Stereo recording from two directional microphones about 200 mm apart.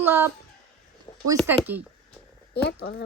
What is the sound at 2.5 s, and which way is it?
Speech, 55° left (ahead or behind).